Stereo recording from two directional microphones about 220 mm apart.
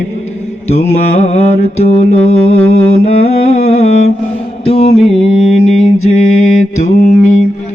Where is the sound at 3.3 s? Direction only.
30° left (ahead or behind).